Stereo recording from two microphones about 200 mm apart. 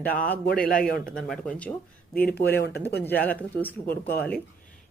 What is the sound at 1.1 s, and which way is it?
A woman's voice, 5° left (ahead or behind).